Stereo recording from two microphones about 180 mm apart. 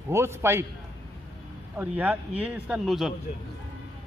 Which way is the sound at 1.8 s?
10° right (ahead or behind).